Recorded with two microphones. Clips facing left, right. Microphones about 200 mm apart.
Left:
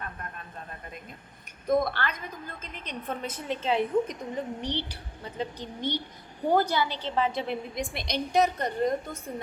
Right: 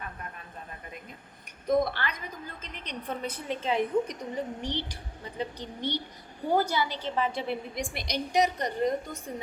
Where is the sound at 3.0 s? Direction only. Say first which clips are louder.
Even; 50° left (ahead or behind).